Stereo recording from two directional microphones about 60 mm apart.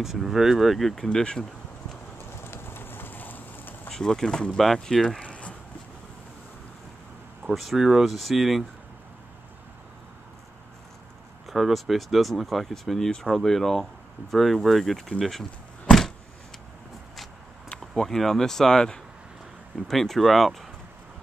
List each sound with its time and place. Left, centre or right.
0.0 s speech: centre
2.4 s a sound: left
3.9 s speech: centre
5.2 s a sound: left
7.5 s speech: centre
11.4 s speech: centre
18.0 s speech: centre